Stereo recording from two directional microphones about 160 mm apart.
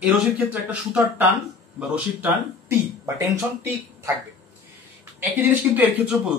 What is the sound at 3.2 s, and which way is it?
Speech, 15° right (ahead or behind).